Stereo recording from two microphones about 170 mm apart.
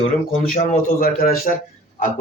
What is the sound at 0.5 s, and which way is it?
Speech, 60° left (ahead or behind).